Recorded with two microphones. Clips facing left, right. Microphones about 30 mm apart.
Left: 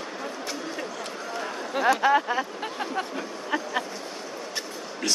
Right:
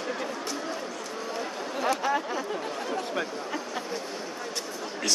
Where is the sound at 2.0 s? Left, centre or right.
Left.